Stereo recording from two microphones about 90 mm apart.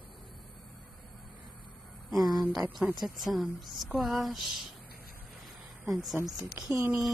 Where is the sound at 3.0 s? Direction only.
Centre (ahead or behind).